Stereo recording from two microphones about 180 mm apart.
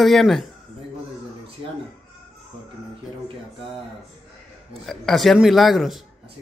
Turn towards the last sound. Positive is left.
turn(degrees=0)  # may be behind; listen again after turning